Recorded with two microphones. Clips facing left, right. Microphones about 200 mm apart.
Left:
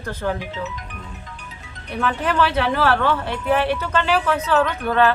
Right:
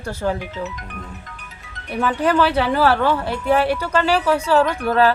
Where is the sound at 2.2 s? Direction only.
35° right (ahead or behind).